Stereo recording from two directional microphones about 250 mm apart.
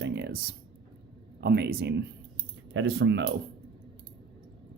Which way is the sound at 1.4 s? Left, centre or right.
Right.